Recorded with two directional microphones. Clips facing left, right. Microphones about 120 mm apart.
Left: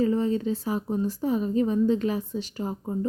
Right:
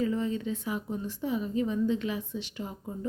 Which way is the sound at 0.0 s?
35° left (ahead or behind).